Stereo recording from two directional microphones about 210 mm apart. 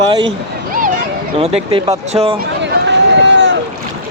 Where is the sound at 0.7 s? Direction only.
40° right (ahead or behind).